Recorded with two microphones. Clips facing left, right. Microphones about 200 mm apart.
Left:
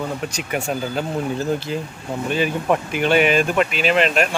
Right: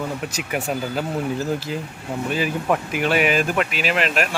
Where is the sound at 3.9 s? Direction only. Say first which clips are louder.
Left 4 dB; 30° left (ahead or behind).